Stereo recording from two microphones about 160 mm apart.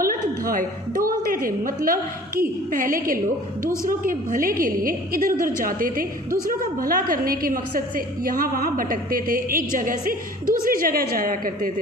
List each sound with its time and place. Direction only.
0.0 s a woman's voice: 60° right (ahead or behind)